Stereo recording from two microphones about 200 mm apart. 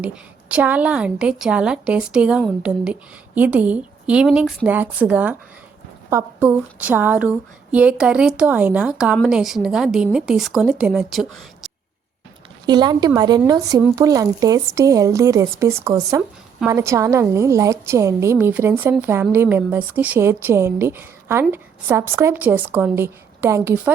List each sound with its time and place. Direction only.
0.0 s a woman's voice: 5° right (ahead or behind)
12.6 s a woman's voice: 20° right (ahead or behind)